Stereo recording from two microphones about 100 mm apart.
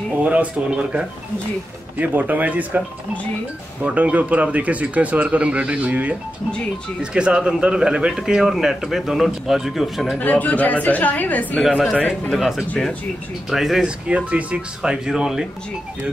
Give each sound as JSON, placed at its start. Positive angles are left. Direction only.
{"t": 0.2, "sound": "speech", "side_deg": -15}
{"t": 3.8, "sound": "speech", "side_deg": -15}
{"t": 10.1, "sound": "speech", "side_deg": 15}
{"t": 11.7, "sound": "speech", "side_deg": 5}